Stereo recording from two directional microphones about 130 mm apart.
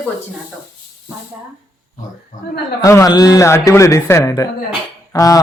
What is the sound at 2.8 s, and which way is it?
Speech, 25° left (ahead or behind).